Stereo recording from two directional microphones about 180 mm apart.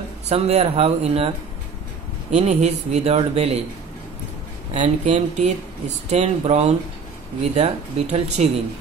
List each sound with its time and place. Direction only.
0.3 s speech: 35° right (ahead or behind)
2.3 s speech: 40° right (ahead or behind)
4.7 s speech: 40° right (ahead or behind)